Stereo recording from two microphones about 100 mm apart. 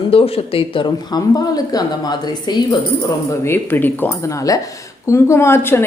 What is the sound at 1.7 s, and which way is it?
Speech, 45° left (ahead or behind).